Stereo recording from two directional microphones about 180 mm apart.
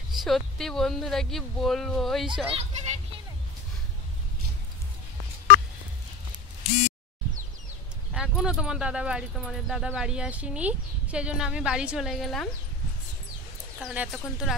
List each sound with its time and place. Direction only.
0.1 s speech: centre (ahead or behind)
2.5 s speech: 40° right (ahead or behind)
8.1 s speech: centre (ahead or behind)
13.7 s speech: 5° right (ahead or behind)